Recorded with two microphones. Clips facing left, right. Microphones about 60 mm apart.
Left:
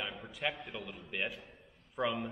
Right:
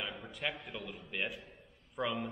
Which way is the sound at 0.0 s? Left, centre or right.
Centre.